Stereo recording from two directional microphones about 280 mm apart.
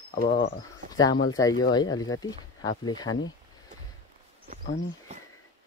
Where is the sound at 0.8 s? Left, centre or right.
Right.